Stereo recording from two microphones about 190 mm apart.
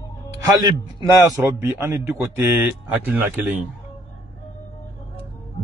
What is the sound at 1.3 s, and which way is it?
A man's voice, 10° right (ahead or behind).